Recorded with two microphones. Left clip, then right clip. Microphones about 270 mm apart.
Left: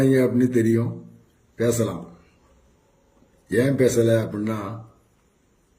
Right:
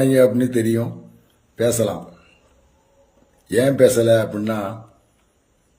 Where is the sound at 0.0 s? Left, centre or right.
Centre.